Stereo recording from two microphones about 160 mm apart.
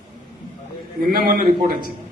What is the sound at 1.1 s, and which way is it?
Speech, 65° right (ahead or behind).